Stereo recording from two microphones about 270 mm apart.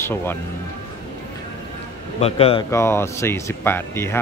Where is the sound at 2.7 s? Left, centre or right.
Centre.